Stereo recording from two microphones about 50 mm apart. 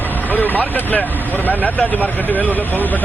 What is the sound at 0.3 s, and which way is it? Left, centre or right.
Vehicle, left.